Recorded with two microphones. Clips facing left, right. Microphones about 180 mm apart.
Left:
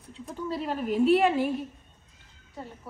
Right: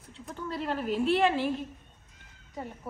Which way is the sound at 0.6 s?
5° left (ahead or behind).